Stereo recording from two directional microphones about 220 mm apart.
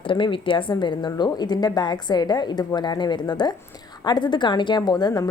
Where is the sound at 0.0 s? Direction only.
25° left (ahead or behind).